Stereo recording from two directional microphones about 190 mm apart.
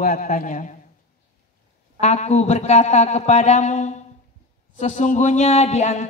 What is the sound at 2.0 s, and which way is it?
Speech, 35° left (ahead or behind).